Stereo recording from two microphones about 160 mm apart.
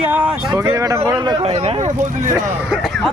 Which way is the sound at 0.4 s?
25° right (ahead or behind).